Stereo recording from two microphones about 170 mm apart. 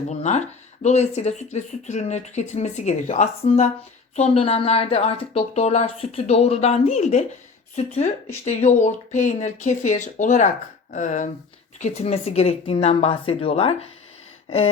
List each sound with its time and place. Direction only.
0.1 s speech: 40° left (ahead or behind)